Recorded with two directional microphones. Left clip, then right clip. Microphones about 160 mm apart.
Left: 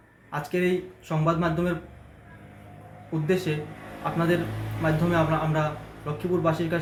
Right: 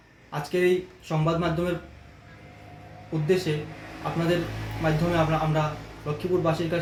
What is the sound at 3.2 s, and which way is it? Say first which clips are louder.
Speech: right 2 dB; 15° right (ahead or behind).